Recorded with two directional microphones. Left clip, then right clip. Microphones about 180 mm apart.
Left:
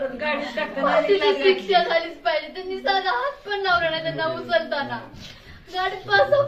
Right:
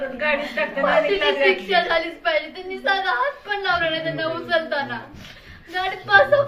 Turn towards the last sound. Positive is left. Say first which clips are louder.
# right 3 dB
turn(degrees=15)  # may be behind; listen again after turning